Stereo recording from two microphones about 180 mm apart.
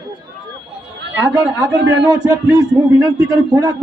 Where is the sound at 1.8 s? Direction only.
90° right.